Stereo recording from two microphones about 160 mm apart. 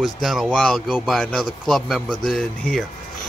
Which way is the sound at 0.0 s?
Centre (ahead or behind).